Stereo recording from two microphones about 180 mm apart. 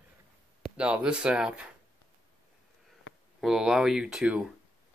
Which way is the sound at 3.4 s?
Centre (ahead or behind).